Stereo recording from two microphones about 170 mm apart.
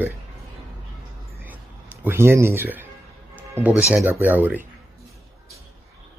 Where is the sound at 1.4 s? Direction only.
10° right (ahead or behind).